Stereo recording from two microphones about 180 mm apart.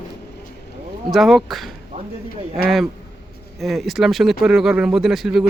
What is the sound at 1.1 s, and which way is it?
Speech, centre (ahead or behind).